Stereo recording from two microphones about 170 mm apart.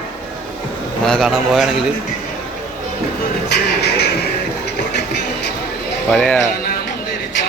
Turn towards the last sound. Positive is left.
turn(degrees=5)  # may be behind; listen again after turning